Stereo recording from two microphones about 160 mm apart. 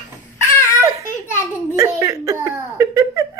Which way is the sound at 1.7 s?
20° right (ahead or behind).